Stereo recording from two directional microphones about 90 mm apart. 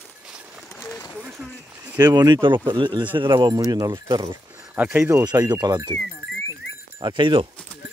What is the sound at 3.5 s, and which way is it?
Speech, 40° right (ahead or behind).